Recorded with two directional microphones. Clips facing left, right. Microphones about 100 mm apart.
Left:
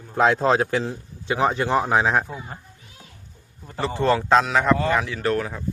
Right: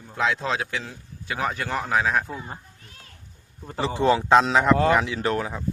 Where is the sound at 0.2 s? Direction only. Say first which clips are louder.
Left 7 dB; 45° left (ahead or behind).